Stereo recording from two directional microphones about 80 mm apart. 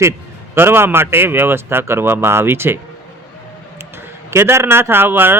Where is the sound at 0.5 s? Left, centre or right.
Right.